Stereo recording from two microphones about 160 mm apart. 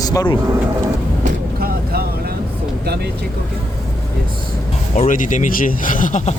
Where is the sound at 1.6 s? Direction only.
75° right (ahead or behind).